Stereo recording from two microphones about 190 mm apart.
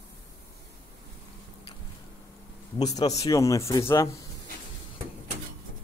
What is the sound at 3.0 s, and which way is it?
A man's voice, 20° left (ahead or behind).